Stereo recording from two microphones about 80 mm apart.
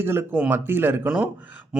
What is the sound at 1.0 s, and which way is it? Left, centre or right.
Speech, centre.